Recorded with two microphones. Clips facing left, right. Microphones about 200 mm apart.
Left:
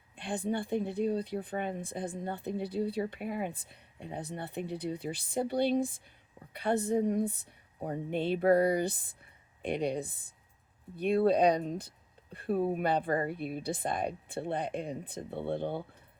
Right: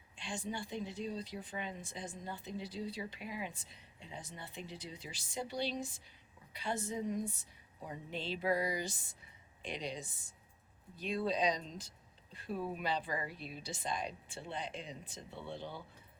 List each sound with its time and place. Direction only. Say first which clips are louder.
0.2 s speech: left 9 dB; 55° left (ahead or behind)